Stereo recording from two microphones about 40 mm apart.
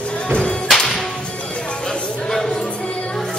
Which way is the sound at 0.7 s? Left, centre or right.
Centre.